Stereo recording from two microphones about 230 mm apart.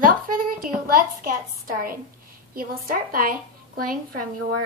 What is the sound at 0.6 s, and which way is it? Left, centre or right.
A woman's voice, right.